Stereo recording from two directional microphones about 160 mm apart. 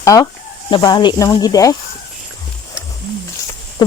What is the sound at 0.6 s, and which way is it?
Speech, 30° left (ahead or behind).